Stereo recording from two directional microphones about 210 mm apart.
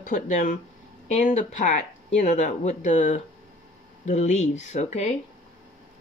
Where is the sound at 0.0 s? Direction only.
35° left (ahead or behind).